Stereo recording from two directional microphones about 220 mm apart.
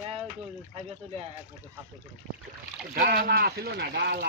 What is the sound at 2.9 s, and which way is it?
Speech, 45° right (ahead or behind).